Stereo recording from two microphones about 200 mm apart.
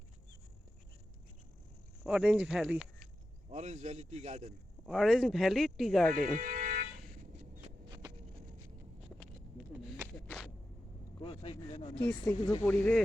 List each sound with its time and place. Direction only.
2.0 s speech: 5° right (ahead or behind)
3.5 s a man's voice: 35° right (ahead or behind)
4.9 s speech: centre (ahead or behind)
6.4 s vehicle: 40° right (ahead or behind)
7.9 s a sound: 20° right (ahead or behind)
10.2 s walk: 5° left (ahead or behind)
11.2 s speech: 25° left (ahead or behind); by 13.0 s 10° left (ahead or behind)